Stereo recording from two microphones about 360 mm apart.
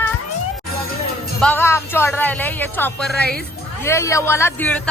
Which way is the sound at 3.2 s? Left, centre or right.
Right.